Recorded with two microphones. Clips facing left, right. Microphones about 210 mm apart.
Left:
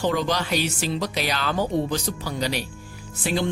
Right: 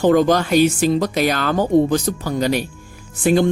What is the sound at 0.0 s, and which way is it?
Speech, 50° right (ahead or behind).